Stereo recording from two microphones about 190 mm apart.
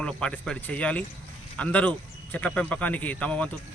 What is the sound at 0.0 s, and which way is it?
Speech, 5° left (ahead or behind).